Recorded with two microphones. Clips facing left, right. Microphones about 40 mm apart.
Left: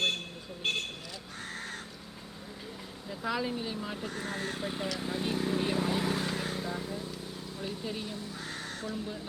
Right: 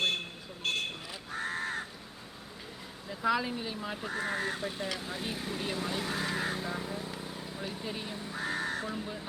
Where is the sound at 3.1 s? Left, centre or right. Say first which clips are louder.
Right 3 dB; centre.